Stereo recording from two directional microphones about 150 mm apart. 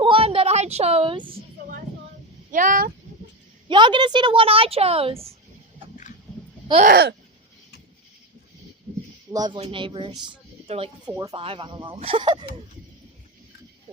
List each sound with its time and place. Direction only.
0.0 s a sound: 35° right (ahead or behind)
2.5 s speech: 60° right (ahead or behind)
3.7 s a woman's voice: 30° right (ahead or behind)
6.7 s a woman's voice: 30° right (ahead or behind)
9.3 s a woman's voice: 25° right (ahead or behind)